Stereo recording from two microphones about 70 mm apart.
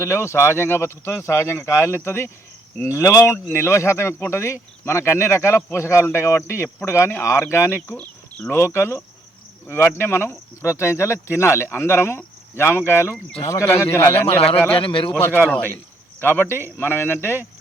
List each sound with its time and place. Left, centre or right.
0.0 s speech: left
7.9 s a sound: centre
8.4 s a man's voice: left